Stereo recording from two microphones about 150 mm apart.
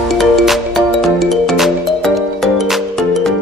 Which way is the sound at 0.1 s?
Centre (ahead or behind).